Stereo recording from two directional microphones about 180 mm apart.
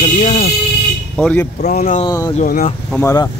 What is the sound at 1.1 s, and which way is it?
Speech, 5° left (ahead or behind).